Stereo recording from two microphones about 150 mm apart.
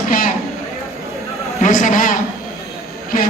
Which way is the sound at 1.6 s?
55° left (ahead or behind).